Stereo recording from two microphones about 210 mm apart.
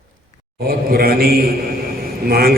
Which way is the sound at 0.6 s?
45° right (ahead or behind).